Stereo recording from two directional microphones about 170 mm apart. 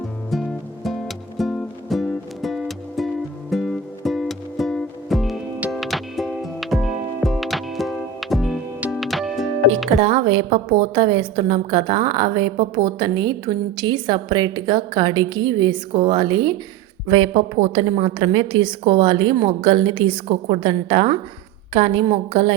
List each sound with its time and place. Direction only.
0.9 s music: centre (ahead or behind)
10.0 s a woman's voice: 30° right (ahead or behind)
17.1 s a woman's voice: 35° right (ahead or behind)